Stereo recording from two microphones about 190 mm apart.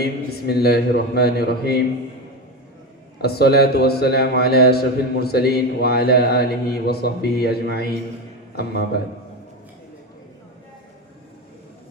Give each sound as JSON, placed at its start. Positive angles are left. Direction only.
{"t": 0.0, "sound": "a man's voice", "side_deg": 55}
{"t": 3.2, "sound": "a man's voice", "side_deg": 55}